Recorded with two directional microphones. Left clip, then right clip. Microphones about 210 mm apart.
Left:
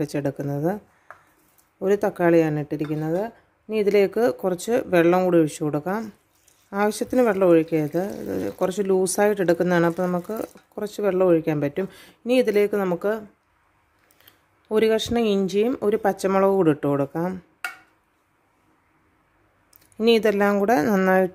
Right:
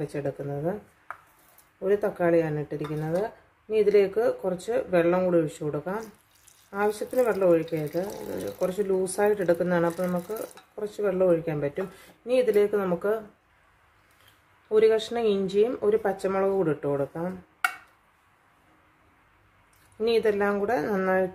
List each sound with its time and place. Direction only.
0.0 s speech: 50° left (ahead or behind)
1.8 s speech: 50° left (ahead or behind)
14.7 s speech: 50° left (ahead or behind)
20.0 s speech: 50° left (ahead or behind)